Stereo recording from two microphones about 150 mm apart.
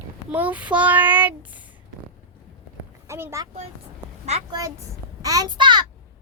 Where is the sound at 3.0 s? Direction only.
15° right (ahead or behind).